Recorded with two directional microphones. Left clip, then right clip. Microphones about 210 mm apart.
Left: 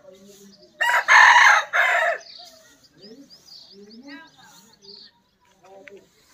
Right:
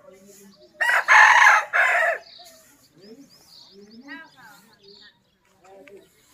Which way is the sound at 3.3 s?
50° right (ahead or behind).